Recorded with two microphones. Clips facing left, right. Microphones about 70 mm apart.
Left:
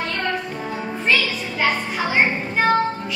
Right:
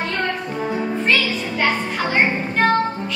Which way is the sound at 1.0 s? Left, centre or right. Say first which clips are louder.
Left 2 dB; centre.